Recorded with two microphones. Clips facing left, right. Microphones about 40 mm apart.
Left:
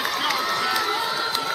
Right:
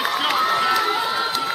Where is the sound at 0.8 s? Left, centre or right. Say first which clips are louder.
Right 3 dB; centre.